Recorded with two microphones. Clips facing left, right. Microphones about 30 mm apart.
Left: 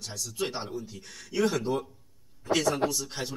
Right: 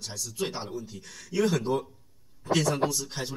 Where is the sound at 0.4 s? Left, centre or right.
Centre.